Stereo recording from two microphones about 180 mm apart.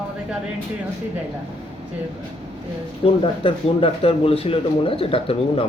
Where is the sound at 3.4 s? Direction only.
30° left (ahead or behind).